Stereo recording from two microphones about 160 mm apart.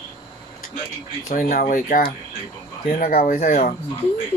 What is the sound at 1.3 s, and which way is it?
Speech, 60° left (ahead or behind).